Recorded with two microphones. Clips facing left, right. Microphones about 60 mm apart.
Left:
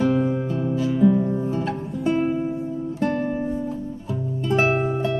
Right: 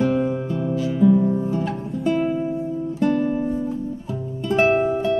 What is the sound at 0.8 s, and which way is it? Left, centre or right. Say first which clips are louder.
Music: right 2 dB; centre.